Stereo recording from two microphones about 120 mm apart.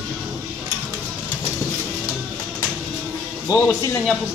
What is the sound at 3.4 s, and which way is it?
Speech, 30° left (ahead or behind).